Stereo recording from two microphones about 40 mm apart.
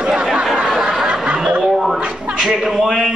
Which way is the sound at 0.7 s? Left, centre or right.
Centre.